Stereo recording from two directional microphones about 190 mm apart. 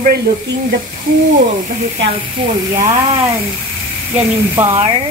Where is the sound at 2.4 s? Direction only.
25° right (ahead or behind).